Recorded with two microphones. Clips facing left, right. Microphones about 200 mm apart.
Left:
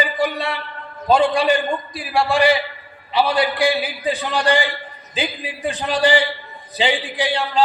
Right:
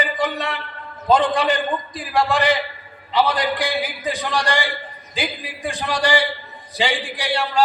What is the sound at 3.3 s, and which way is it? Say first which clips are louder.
A man's voice: left 4 dB; 15° right (ahead or behind).